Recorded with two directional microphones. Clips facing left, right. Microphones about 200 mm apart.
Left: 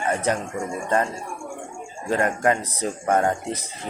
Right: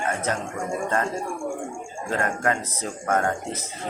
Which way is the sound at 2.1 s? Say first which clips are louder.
Left 4 dB; 20° left (ahead or behind).